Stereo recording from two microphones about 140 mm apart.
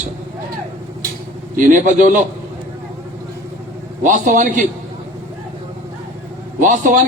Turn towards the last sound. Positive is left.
turn(degrees=-70)  # may be behind; listen again after turning